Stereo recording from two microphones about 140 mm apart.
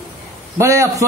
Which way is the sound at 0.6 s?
20° right (ahead or behind).